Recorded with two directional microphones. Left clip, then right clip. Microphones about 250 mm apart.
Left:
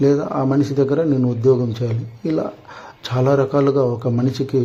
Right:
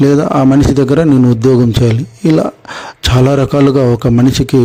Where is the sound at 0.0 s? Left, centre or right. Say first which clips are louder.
Right 8 dB; right.